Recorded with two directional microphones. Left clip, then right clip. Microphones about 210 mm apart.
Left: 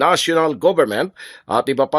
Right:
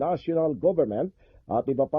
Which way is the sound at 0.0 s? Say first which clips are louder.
Left 10 dB; 40° left (ahead or behind).